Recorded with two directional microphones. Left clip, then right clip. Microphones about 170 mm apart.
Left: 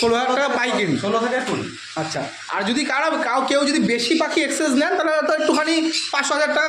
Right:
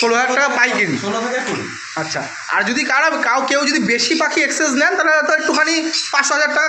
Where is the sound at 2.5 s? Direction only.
15° left (ahead or behind).